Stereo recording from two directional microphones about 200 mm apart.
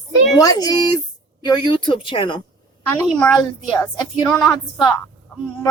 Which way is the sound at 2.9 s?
5° left (ahead or behind).